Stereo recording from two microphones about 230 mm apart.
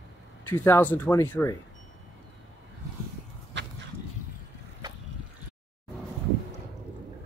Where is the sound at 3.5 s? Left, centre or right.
Right.